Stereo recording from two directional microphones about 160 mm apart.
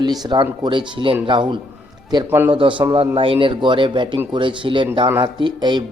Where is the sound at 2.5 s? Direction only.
30° right (ahead or behind).